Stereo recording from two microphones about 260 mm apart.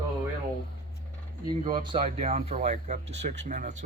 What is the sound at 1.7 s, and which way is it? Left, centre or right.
Speech, centre.